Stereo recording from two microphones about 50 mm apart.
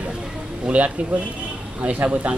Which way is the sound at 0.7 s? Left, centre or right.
Right.